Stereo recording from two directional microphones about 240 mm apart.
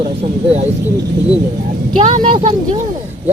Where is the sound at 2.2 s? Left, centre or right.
Right.